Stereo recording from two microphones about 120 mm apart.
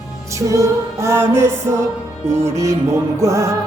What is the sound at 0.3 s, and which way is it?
Music, 25° right (ahead or behind).